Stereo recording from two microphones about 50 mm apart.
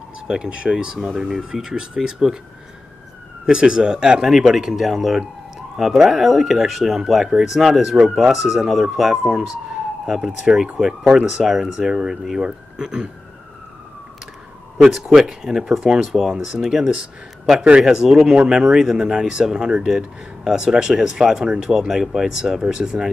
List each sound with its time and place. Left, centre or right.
0.3 s speech: centre
0.9 s speech: centre
1.5 s speech: centre
3.4 s speech: centre
11.9 s speech: centre
14.8 s speech: centre